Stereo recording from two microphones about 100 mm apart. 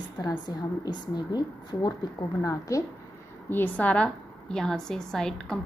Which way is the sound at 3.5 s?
15° left (ahead or behind).